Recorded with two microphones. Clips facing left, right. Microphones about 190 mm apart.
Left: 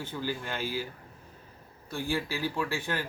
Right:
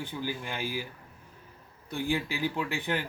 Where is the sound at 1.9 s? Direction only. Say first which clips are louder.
Right 1 dB; 20° right (ahead or behind).